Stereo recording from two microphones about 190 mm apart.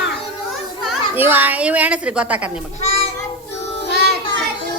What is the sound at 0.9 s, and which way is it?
A child's voice, 10° right (ahead or behind).